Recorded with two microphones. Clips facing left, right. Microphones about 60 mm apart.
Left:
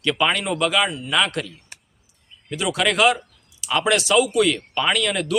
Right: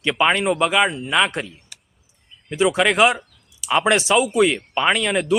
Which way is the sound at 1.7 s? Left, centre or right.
Left.